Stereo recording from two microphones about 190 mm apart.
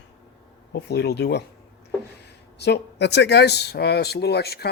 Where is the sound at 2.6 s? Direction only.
65° left (ahead or behind).